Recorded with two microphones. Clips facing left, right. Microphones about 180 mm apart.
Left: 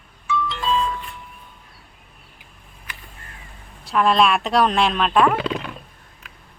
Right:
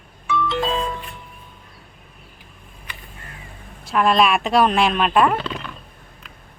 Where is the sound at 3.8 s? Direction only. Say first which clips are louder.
Even; centre (ahead or behind).